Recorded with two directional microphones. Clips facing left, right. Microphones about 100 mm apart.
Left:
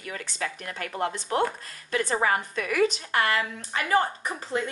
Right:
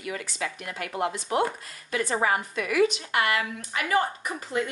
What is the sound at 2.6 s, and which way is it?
Speech, 40° left (ahead or behind).